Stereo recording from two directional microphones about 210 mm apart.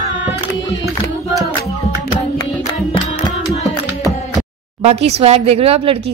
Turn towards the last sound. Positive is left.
turn(degrees=-30)  # may be behind; listen again after turning